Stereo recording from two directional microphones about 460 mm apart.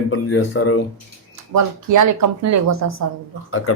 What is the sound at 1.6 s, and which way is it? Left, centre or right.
Speech, right.